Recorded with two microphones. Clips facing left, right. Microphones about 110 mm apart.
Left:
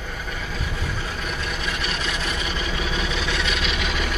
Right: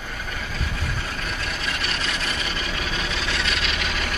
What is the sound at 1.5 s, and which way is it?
Vehicle, 15° left (ahead or behind).